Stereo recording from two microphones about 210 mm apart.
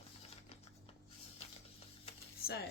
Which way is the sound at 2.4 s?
45° left (ahead or behind).